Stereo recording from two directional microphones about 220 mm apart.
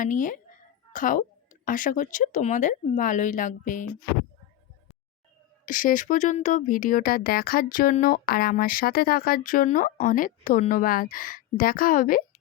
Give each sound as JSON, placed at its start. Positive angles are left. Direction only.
{"t": 0.0, "sound": "speech", "side_deg": 35}
{"t": 5.6, "sound": "speech", "side_deg": 35}